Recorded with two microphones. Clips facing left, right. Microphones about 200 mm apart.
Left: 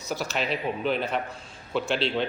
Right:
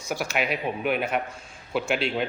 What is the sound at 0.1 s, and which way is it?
A man's voice, 10° right (ahead or behind).